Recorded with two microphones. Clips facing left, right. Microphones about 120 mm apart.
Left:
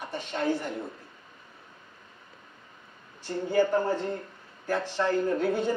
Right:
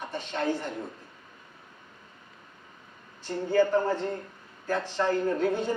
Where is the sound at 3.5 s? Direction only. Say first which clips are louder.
Right 1 dB; 15° left (ahead or behind).